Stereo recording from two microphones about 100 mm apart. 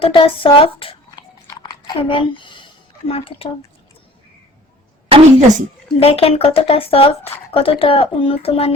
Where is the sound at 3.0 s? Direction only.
75° left (ahead or behind).